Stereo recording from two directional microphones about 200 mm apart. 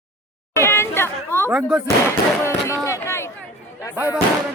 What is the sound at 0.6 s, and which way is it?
Chatter, 10° left (ahead or behind).